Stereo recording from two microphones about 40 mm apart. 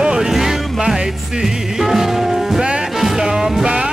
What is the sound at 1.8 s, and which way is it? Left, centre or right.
Music, centre.